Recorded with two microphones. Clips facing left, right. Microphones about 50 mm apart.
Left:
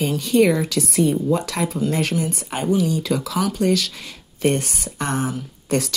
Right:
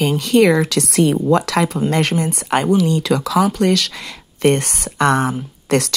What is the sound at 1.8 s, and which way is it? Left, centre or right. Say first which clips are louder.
Speech: right 4 dB; right.